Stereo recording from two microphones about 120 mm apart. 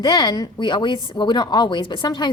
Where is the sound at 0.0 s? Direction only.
35° left (ahead or behind).